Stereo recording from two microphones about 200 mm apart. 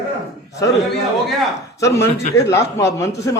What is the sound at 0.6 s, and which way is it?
Speech, 15° left (ahead or behind).